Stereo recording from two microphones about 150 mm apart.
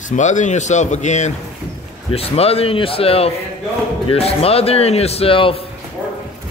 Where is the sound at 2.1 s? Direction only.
40° left (ahead or behind).